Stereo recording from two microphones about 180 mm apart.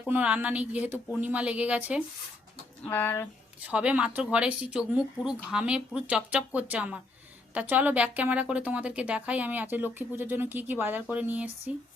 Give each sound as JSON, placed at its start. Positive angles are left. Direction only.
{"t": 0.0, "sound": "a woman's voice", "side_deg": -5}
{"t": 2.8, "sound": "speech", "side_deg": 10}
{"t": 3.6, "sound": "a woman's voice", "side_deg": -5}